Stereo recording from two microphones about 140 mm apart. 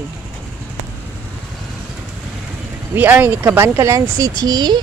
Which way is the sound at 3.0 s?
15° right (ahead or behind).